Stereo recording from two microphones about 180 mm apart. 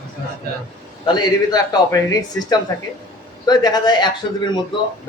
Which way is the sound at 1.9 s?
20° left (ahead or behind).